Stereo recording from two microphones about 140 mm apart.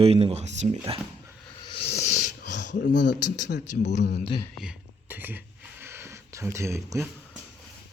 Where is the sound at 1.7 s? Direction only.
50° left (ahead or behind).